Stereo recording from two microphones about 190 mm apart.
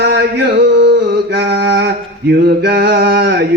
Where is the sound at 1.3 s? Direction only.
55° right (ahead or behind).